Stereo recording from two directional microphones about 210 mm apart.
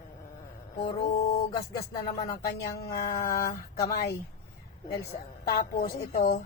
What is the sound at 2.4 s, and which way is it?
Speech, 50° left (ahead or behind).